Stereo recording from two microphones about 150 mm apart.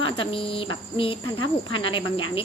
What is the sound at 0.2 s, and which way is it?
Speech, 35° left (ahead or behind).